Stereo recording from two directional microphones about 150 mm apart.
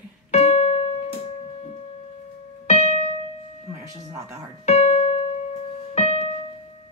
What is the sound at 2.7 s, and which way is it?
Music, 50° left (ahead or behind).